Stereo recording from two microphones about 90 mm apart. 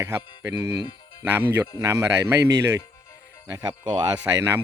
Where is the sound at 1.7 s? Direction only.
35° right (ahead or behind).